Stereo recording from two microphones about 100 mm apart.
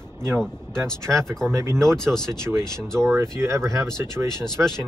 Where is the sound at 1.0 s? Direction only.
25° right (ahead or behind).